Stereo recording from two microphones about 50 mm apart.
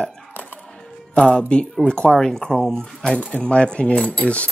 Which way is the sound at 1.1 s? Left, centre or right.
Left.